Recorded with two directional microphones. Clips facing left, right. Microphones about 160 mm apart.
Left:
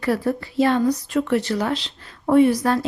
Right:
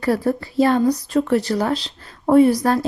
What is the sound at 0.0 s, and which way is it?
A woman's voice, 35° right (ahead or behind).